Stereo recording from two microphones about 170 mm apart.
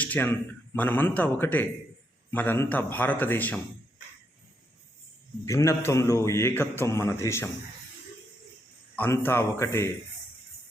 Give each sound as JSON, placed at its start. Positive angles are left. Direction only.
{"t": 0.0, "sound": "a man's voice", "side_deg": 10}
{"t": 5.5, "sound": "a man's voice", "side_deg": 15}
{"t": 9.0, "sound": "a man's voice", "side_deg": 15}